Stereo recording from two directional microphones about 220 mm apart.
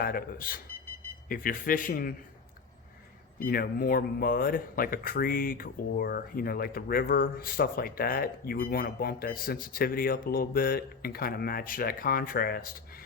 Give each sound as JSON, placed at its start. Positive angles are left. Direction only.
{"t": 0.0, "sound": "speech", "side_deg": 40}
{"t": 3.3, "sound": "speech", "side_deg": 40}